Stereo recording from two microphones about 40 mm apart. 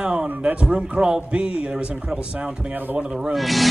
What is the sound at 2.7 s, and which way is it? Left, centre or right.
Speech, right.